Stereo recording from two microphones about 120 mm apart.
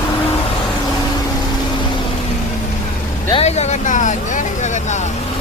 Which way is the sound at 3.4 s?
65° left (ahead or behind).